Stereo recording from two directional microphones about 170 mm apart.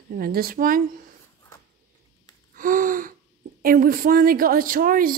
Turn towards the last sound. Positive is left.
turn(degrees=-55)  # may be behind; listen again after turning